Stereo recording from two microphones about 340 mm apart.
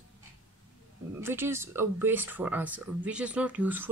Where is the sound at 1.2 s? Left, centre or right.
Centre.